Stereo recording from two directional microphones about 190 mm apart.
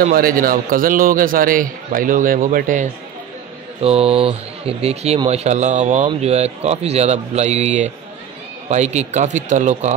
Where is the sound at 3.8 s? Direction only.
30° right (ahead or behind).